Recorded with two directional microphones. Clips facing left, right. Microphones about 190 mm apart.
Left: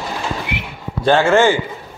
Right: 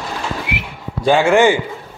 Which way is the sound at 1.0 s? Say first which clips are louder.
Right 1 dB; 10° right (ahead or behind).